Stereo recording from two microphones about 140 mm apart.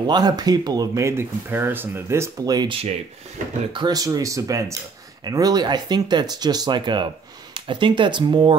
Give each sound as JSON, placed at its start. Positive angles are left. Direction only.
{"t": 0.0, "sound": "speech", "side_deg": -30}